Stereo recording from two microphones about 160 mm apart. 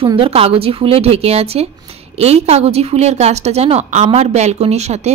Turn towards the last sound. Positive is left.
turn(degrees=-45)  # may be behind; listen again after turning